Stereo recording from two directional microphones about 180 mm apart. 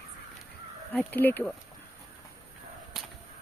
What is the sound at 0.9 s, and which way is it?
Speech, 10° left (ahead or behind).